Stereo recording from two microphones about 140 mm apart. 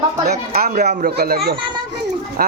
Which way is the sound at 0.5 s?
80° right.